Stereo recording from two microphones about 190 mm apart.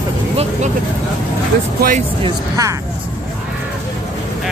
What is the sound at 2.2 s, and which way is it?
Speech, 20° right (ahead or behind).